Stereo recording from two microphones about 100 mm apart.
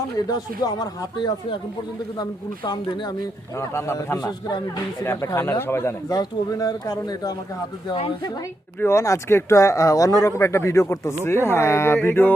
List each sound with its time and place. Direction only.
0.3 s speech: 40° left (ahead or behind)
3.6 s speech: 30° left (ahead or behind)
4.2 s speech: 45° left (ahead or behind)
5.0 s speech: 30° left (ahead or behind)
6.1 s speech: 40° left (ahead or behind)
8.8 s speech: 25° left (ahead or behind)